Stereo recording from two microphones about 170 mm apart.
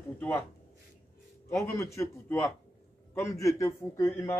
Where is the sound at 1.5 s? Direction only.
15° left (ahead or behind).